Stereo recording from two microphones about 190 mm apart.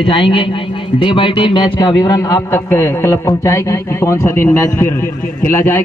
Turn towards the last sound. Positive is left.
turn(degrees=10)  # may be behind; listen again after turning